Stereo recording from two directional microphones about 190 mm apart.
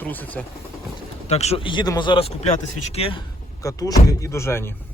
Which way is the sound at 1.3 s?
35° left (ahead or behind).